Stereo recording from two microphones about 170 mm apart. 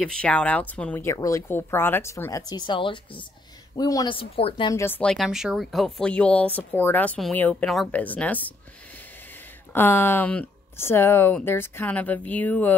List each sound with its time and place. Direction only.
0.0 s speech: 5° left (ahead or behind); by 4.7 s 30° left (ahead or behind)
4.7 s speech: 10° left (ahead or behind)
5.1 s speech: centre (ahead or behind)
9.7 s speech: 15° left (ahead or behind)